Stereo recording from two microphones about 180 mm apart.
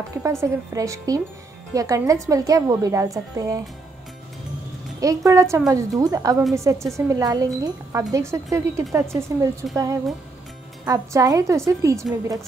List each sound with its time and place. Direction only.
0.2 s a woman's voice: 15° right (ahead or behind)
5.0 s a woman's voice: 15° right (ahead or behind)
10.9 s a woman's voice: 20° right (ahead or behind)